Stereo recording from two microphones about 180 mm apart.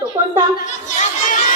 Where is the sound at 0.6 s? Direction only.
45° left (ahead or behind).